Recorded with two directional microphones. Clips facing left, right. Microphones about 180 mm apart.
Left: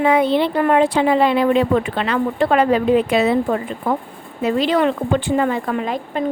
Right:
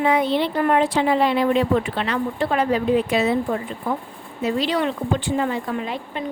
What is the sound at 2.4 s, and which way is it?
Speech, 85° left.